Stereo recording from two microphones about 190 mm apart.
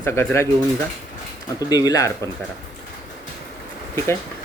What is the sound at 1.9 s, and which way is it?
Speech, 15° left (ahead or behind).